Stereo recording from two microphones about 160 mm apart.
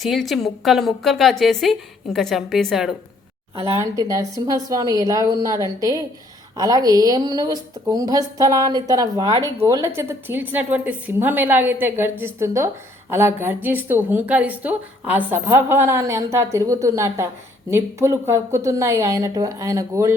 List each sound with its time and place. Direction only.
0.0 s a woman's voice: centre (ahead or behind)
3.6 s a woman's voice: 20° right (ahead or behind)